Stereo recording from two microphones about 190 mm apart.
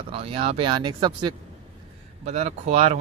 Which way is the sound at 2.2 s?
35° right (ahead or behind).